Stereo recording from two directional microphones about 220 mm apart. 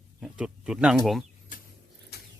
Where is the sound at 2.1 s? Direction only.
45° left (ahead or behind).